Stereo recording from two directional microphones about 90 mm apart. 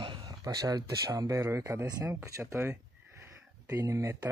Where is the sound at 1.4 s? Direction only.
30° right (ahead or behind).